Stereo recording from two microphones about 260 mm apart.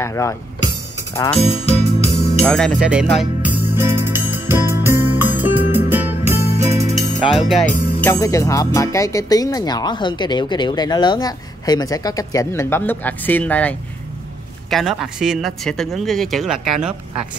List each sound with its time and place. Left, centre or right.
0.0 s speech: centre
1.7 s music: left
2.4 s music: centre
7.2 s speech: centre
8.0 s speech: centre